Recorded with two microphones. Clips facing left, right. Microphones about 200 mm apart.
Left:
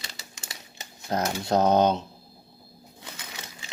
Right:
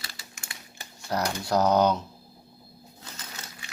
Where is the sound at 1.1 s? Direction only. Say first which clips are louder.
Left 2 dB; 20° left (ahead or behind).